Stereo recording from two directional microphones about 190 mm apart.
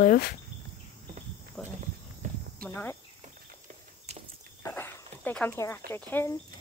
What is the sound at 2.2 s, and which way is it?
Cricket, 40° right (ahead or behind).